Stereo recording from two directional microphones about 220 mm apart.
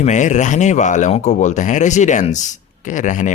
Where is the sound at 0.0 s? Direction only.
35° left (ahead or behind).